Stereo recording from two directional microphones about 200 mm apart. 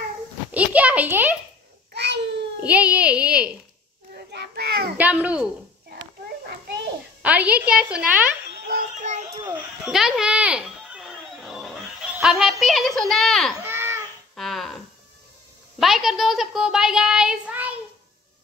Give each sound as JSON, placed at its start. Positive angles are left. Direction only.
{"t": 0.5, "sound": "a child's voice", "side_deg": -5}
{"t": 2.0, "sound": "babbling", "side_deg": -60}
{"t": 2.6, "sound": "a woman's voice", "side_deg": -5}
{"t": 4.1, "sound": "children playing", "side_deg": -55}
{"t": 4.9, "sound": "a woman's voice", "side_deg": -5}
{"t": 7.2, "sound": "a woman's voice", "side_deg": -5}
{"t": 8.6, "sound": "music", "side_deg": -40}
{"t": 9.8, "sound": "a sound", "side_deg": 0}
{"t": 12.2, "sound": "speech", "side_deg": -5}
{"t": 13.7, "sound": "babbling", "side_deg": -10}
{"t": 14.3, "sound": "a sound", "side_deg": 0}
{"t": 15.8, "sound": "a child's voice", "side_deg": 0}